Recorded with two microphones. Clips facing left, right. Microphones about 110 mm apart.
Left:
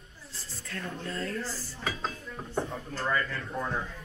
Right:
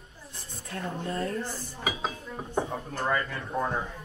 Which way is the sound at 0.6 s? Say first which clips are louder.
Right 4 dB; 20° right (ahead or behind).